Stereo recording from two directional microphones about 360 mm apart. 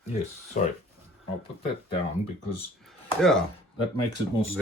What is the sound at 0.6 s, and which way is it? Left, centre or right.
Speech, left.